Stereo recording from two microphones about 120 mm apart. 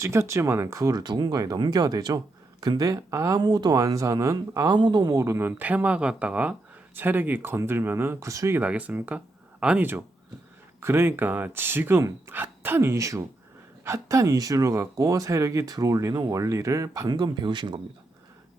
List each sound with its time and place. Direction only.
0.0 s speech: 25° right (ahead or behind)
5.2 s speech: 20° right (ahead or behind)
8.6 s speech: 10° right (ahead or behind); by 17.7 s 40° right (ahead or behind)